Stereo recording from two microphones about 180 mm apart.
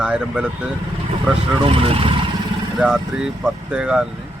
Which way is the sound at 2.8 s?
5° right (ahead or behind).